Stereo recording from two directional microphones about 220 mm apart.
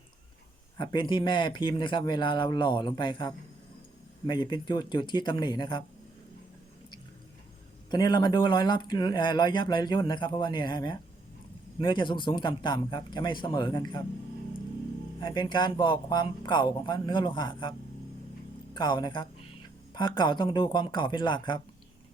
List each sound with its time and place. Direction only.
0.8 s speech: 20° left (ahead or behind)
7.9 s speech: 20° left (ahead or behind)
15.2 s speech: 20° left (ahead or behind)